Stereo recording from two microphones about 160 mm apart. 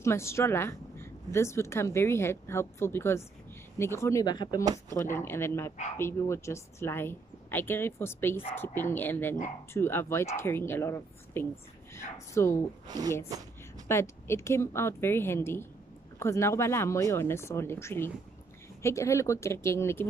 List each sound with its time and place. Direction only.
0.0 s a woman's voice: 15° left (ahead or behind)
12.8 s a woman's voice: 25° right (ahead or behind)
13.8 s a woman's voice: 15° left (ahead or behind)